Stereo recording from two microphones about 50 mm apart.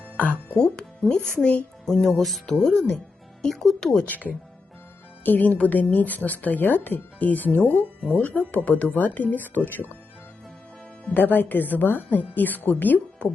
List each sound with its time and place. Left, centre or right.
0.5 s speech: centre
1.8 s speech: centre
4.0 s a woman's voice: left
11.1 s a woman's voice: left